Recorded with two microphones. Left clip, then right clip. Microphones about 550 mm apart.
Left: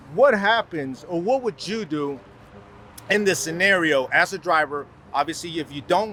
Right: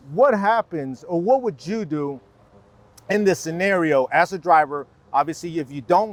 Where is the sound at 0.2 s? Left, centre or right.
Right.